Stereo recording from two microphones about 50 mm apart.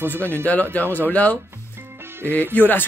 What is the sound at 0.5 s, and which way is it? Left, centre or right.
Speech, left.